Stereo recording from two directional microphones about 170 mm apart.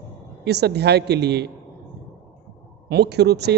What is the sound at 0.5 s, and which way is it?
A man's voice, 75° right (ahead or behind).